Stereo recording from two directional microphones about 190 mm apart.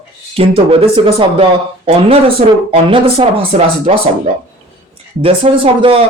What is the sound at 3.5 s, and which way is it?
Speech, 40° right (ahead or behind).